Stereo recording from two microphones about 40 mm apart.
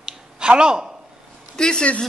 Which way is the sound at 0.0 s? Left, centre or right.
Right.